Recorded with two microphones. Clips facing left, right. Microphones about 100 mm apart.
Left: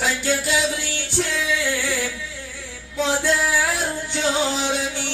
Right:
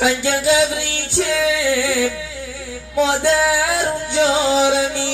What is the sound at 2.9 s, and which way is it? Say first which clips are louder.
Music: right 5 dB; 90° right.